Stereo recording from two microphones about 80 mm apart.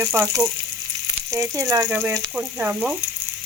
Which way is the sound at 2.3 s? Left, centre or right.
Centre.